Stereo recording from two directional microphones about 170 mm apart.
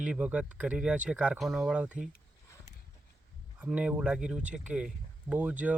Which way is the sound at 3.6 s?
10° right (ahead or behind).